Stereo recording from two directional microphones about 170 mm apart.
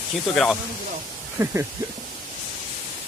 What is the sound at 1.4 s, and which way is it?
Speech, 15° right (ahead or behind).